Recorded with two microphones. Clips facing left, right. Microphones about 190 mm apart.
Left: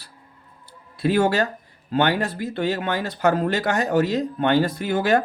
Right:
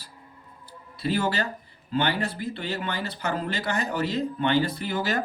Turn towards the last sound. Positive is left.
turn(degrees=55)  # may be behind; listen again after turning